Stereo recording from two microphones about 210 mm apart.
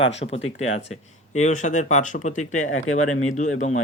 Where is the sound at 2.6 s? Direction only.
75° left (ahead or behind).